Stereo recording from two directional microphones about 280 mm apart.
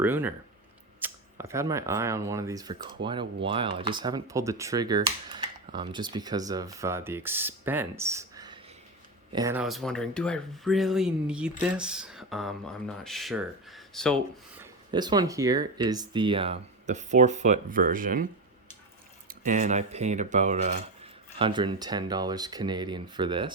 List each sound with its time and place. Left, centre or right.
0.0 s speech: centre
14.6 s speech: centre
19.3 s speech: right